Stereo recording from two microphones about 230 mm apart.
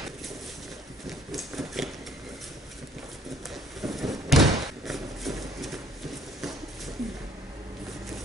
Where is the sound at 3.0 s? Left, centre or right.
Centre.